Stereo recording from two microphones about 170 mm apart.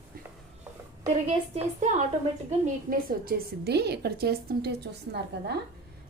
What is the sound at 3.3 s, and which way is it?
A woman's voice, 65° right (ahead or behind).